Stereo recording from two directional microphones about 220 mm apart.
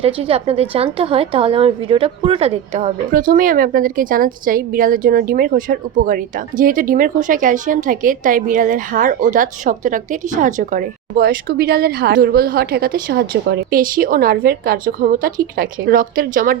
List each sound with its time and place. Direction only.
0.0 s a woman's voice: 25° right (ahead or behind)
3.1 s a woman's voice: 40° right (ahead or behind)